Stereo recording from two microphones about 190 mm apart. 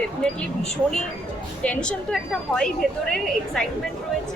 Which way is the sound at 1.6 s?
5° left (ahead or behind).